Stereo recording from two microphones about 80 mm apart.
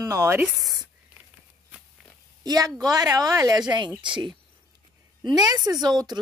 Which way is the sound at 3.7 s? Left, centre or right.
Right.